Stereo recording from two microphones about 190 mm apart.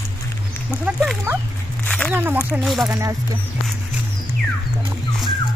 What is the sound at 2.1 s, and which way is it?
Speech, 10° right (ahead or behind).